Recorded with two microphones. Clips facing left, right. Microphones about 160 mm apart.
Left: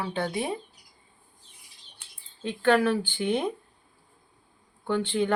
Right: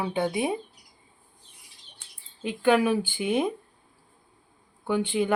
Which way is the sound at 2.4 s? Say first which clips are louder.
Right 1 dB; 10° right (ahead or behind).